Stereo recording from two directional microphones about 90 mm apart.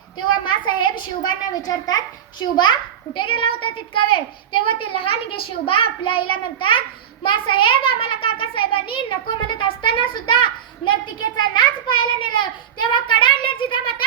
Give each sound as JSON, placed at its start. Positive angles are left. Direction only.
{"t": 0.2, "sound": "a woman's voice", "side_deg": 60}
{"t": 3.2, "sound": "a child's voice", "side_deg": 70}
{"t": 11.5, "sound": "a child's voice", "side_deg": 60}